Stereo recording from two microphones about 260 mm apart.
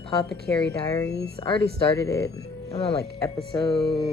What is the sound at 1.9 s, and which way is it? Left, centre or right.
Speech, centre.